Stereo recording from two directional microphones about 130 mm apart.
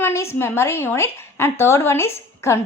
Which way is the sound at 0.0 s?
20° left (ahead or behind).